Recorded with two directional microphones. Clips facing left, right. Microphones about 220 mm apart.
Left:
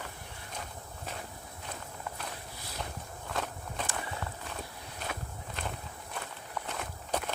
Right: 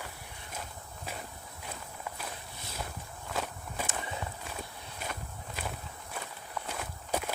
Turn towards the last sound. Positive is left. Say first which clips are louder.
# even
turn(degrees=-5)  # may be behind; listen again after turning